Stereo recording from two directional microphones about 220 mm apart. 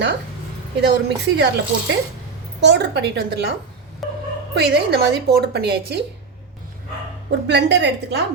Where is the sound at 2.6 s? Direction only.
50° right (ahead or behind).